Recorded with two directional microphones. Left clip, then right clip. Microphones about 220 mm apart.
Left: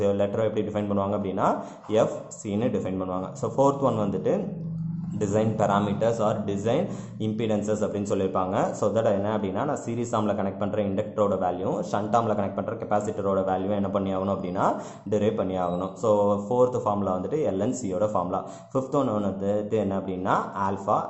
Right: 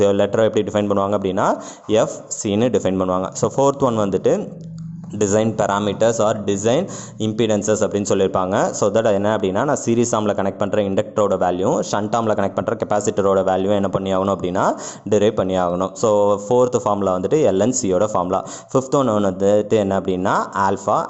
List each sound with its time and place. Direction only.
0.0 s speech: 40° right (ahead or behind)